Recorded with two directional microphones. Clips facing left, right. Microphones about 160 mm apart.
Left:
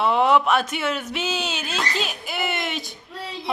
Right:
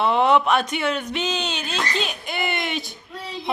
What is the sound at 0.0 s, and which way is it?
Speech, 5° left (ahead or behind).